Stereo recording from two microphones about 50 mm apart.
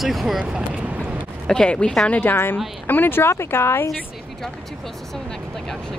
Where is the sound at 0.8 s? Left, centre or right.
Right.